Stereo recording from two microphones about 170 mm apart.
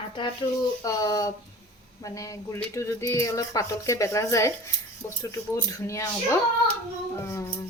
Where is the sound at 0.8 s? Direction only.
20° left (ahead or behind).